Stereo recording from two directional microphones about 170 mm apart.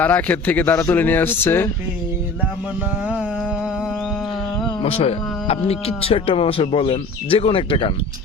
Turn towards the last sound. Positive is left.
turn(degrees=30)  # may be behind; listen again after turning